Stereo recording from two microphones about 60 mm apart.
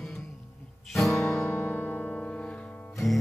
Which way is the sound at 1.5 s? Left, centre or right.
Left.